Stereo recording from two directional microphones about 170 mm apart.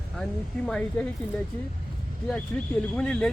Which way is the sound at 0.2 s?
5° left (ahead or behind).